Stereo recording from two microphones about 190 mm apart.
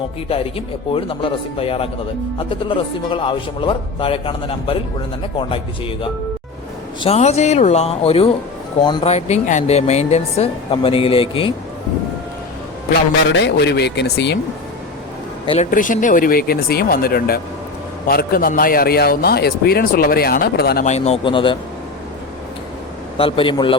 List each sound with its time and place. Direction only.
0.3 s speech: 30° left (ahead or behind)
7.0 s speech: 35° left (ahead or behind)
13.3 s speech: 65° left (ahead or behind)
15.7 s a man's voice: 45° left (ahead or behind)
20.8 s speech: 35° left (ahead or behind)
23.1 s speech: 30° left (ahead or behind)